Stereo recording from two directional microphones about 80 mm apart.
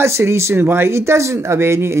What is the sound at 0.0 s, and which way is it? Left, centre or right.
Speech, right.